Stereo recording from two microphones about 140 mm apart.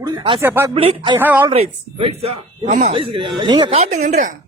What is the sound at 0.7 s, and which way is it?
Speech, 40° right (ahead or behind).